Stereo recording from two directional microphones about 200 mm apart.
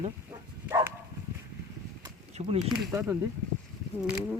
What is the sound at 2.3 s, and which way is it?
Speech, 35° right (ahead or behind).